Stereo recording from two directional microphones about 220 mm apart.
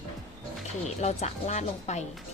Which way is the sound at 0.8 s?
30° left (ahead or behind).